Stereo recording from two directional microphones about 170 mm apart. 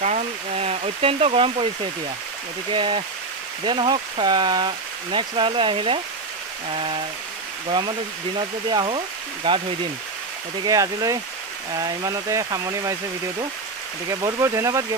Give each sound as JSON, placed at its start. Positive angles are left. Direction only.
{"t": 0.0, "sound": "a sound", "side_deg": -40}
{"t": 2.7, "sound": "speech", "side_deg": -25}
{"t": 8.4, "sound": "speech", "side_deg": -25}
{"t": 10.6, "sound": "speech", "side_deg": -20}
{"t": 14.0, "sound": "speech", "side_deg": -15}